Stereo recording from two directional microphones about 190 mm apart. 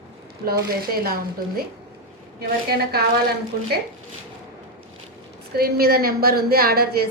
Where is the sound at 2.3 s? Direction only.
55° right (ahead or behind).